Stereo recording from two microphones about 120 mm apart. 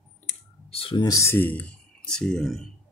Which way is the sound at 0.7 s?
50° left (ahead or behind).